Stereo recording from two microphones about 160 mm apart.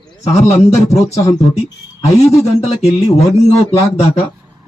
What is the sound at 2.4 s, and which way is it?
Speech, 40° left (ahead or behind).